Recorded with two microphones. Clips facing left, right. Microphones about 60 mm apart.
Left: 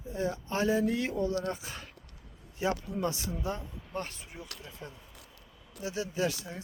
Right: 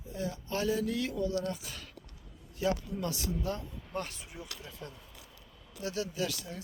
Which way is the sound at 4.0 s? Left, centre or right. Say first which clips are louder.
Even; left.